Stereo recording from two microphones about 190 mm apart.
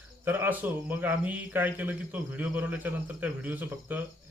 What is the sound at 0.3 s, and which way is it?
Speech, 10° right (ahead or behind).